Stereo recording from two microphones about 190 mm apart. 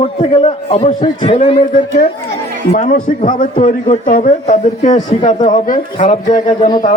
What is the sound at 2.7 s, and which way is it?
A man's voice, 40° left (ahead or behind).